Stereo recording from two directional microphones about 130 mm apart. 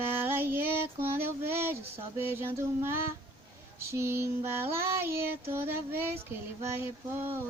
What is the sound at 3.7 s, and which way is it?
Child singing, 20° right (ahead or behind).